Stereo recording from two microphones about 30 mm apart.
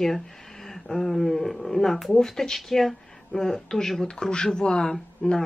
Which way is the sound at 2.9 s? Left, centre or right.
Centre.